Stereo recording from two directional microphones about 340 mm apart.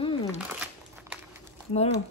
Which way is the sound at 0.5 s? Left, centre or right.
Centre.